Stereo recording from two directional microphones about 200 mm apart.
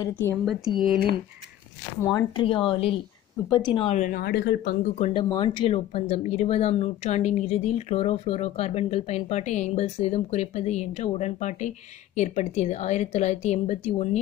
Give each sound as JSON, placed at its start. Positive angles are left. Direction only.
{"t": 0.0, "sound": "speech", "side_deg": 10}
{"t": 2.0, "sound": "speech", "side_deg": 15}
{"t": 4.8, "sound": "speech", "side_deg": 35}
{"t": 5.3, "sound": "speech", "side_deg": 20}